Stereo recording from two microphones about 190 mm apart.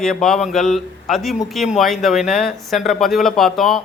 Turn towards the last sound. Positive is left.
turn(degrees=0)  # may be behind; listen again after turning